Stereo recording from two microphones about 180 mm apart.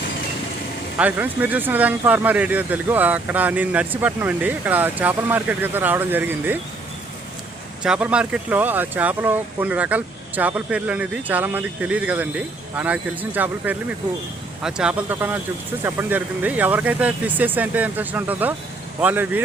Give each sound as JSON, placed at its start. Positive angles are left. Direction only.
{"t": 0.9, "sound": "speech", "side_deg": -10}
{"t": 7.8, "sound": "speech", "side_deg": -5}